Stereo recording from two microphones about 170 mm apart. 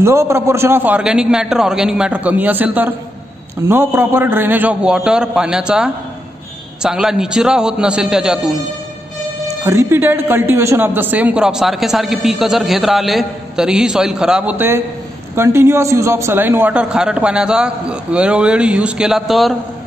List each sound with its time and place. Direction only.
0.0 s a man's voice: 15° right (ahead or behind)
9.7 s a man's voice: 15° right (ahead or behind); by 19.5 s centre (ahead or behind)